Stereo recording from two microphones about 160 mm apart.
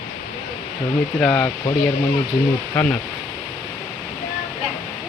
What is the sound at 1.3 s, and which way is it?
Speech, 20° left (ahead or behind).